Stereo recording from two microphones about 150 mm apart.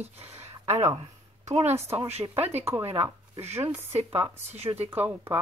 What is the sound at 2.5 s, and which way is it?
Speech, 45° right (ahead or behind).